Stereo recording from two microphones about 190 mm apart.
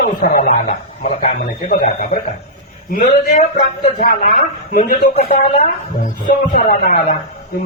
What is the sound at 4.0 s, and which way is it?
A man's voice, 50° left (ahead or behind).